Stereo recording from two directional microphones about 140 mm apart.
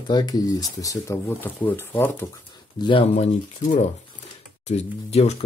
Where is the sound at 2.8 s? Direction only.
35° left (ahead or behind).